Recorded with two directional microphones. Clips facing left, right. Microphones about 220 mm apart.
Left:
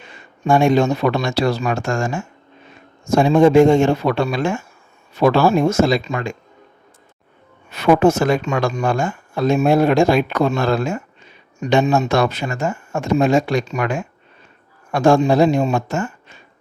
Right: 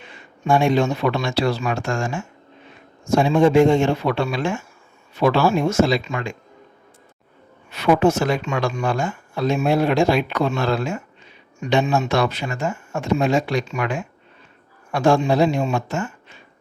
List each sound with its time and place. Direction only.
0.0 s speech: 45° left (ahead or behind)
7.7 s speech: 45° left (ahead or behind)